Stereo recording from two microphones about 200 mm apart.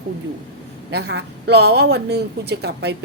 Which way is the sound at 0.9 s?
55° right (ahead or behind).